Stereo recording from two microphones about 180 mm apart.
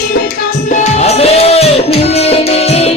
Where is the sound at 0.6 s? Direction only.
40° left (ahead or behind).